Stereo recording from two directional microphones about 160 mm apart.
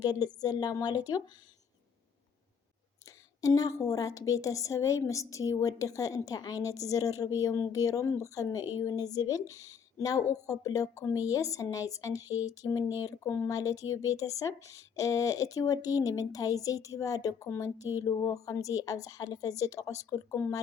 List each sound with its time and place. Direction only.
0.0 s speech: 25° left (ahead or behind)
3.4 s speech: 20° left (ahead or behind)